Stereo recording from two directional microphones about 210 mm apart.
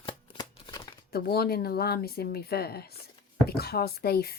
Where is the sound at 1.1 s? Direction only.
45° left (ahead or behind).